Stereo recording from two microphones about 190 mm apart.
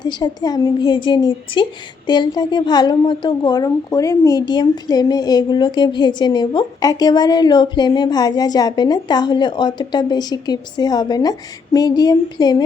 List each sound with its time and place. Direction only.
0.0 s a woman's voice: 20° left (ahead or behind)